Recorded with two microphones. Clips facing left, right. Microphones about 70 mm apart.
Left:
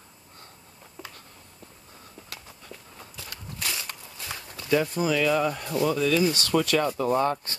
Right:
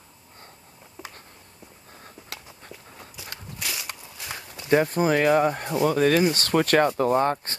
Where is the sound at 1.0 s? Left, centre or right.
Centre.